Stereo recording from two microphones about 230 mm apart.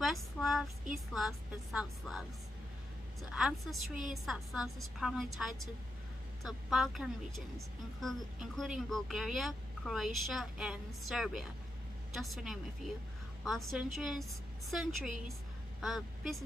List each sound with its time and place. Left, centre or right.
0.0 s child singing: centre
0.9 s speech: centre
3.3 s speech: centre